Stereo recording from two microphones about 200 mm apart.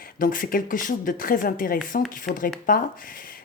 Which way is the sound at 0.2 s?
45° left (ahead or behind).